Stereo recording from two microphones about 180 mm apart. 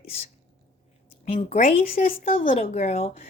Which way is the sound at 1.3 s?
40° left (ahead or behind).